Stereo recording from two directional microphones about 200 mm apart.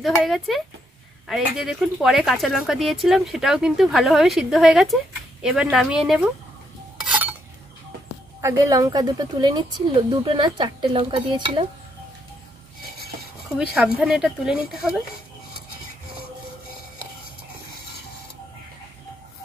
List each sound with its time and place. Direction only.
0.0 s speech: centre (ahead or behind)
7.0 s dishes: 5° right (ahead or behind)
8.4 s a woman's voice: 15° right (ahead or behind)
13.6 s speech: 5° right (ahead or behind)